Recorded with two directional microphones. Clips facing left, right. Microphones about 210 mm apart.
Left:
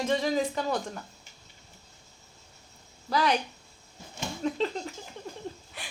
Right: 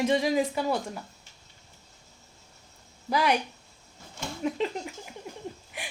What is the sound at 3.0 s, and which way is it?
Speech, 10° right (ahead or behind).